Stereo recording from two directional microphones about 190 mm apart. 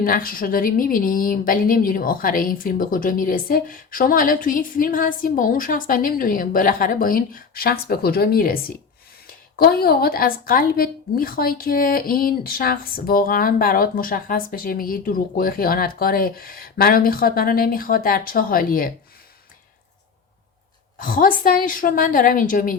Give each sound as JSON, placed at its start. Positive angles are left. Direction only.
{"t": 0.0, "sound": "a woman's voice", "side_deg": 50}
{"t": 21.0, "sound": "a woman's voice", "side_deg": 45}